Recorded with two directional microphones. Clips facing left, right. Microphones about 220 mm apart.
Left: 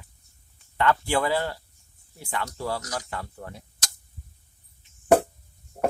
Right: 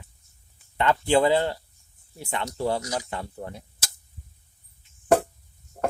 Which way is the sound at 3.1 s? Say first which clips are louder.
Right 2 dB; 20° right (ahead or behind).